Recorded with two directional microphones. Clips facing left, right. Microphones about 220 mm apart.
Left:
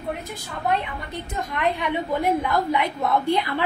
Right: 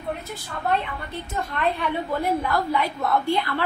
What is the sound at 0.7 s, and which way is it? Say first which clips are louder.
A woman's voice: even; 15° left (ahead or behind).